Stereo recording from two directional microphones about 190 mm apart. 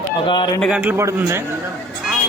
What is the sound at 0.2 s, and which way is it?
Speech, 25° left (ahead or behind).